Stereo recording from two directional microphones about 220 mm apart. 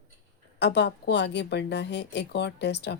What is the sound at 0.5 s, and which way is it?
A woman's voice, 50° left (ahead or behind).